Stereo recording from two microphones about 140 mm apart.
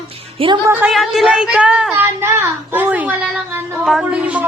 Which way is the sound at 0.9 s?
Centre (ahead or behind).